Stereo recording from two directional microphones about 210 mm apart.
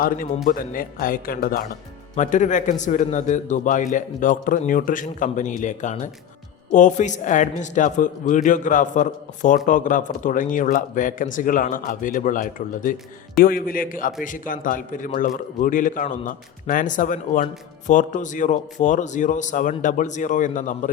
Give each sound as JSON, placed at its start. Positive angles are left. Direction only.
{"t": 0.4, "sound": "a man's voice", "side_deg": 40}